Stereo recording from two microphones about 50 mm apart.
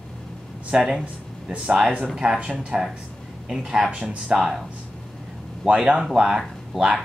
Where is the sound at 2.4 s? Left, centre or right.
Right.